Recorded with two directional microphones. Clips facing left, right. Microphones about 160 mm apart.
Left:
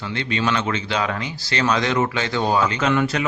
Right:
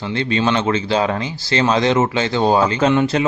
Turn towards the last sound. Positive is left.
turn(degrees=-25)  # may be behind; listen again after turning